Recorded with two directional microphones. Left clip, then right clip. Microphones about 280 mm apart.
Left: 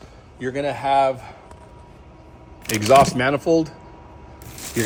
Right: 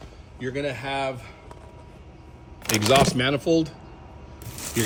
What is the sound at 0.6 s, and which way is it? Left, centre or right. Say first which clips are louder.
Speech: left 11 dB; centre.